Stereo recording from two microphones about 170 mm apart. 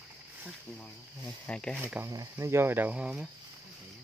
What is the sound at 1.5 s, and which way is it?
Speech, 5° left (ahead or behind).